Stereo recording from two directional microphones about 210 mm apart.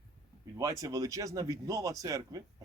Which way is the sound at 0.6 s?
15° right (ahead or behind).